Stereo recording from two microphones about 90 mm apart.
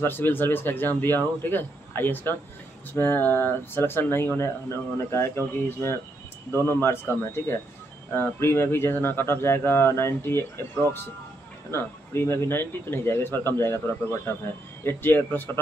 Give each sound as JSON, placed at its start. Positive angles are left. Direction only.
{"t": 0.0, "sound": "speech", "side_deg": 25}
{"t": 14.8, "sound": "speech", "side_deg": 25}